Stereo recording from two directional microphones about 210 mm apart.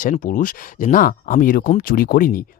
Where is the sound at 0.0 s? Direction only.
40° left (ahead or behind).